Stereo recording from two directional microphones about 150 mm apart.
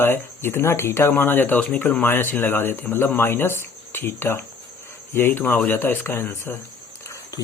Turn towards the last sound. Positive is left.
turn(degrees=15)  # may be behind; listen again after turning